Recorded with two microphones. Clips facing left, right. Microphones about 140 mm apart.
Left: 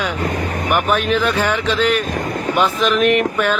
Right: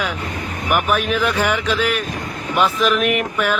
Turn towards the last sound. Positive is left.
turn(degrees=-10)  # may be behind; listen again after turning